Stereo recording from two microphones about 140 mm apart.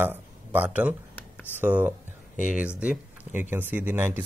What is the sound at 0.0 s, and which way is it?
Speech, 15° right (ahead or behind).